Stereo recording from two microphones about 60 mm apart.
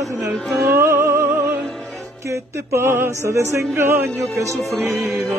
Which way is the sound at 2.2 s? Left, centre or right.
Right.